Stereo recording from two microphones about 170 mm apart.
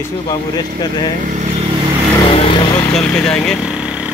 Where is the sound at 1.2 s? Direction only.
45° right (ahead or behind).